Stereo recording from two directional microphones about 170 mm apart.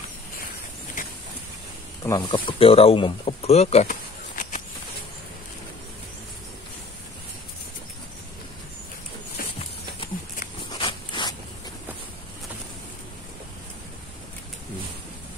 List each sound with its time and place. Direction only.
1.0 s vehicle: 50° left (ahead or behind)
2.0 s speech: 25° left (ahead or behind); by 4.6 s 50° left (ahead or behind)
9.4 s a sound: 60° left (ahead or behind)
10.7 s zipper: 30° left (ahead or behind)